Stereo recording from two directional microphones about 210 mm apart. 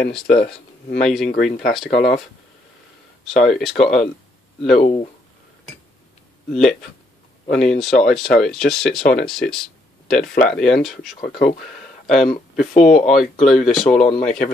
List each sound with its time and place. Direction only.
0.0 s speech: 5° left (ahead or behind)
1.3 s speech: 40° left (ahead or behind)
2.0 s speech: centre (ahead or behind)
3.4 s speech: centre (ahead or behind)
4.7 s speech: 25° left (ahead or behind)
6.5 s speech: 5° left (ahead or behind)
10.2 s speech: 45° left (ahead or behind)
10.6 s speech: centre (ahead or behind)
11.1 s speech: 45° left (ahead or behind)
13.1 s speech: centre (ahead or behind)
13.8 s speech: 30° left (ahead or behind)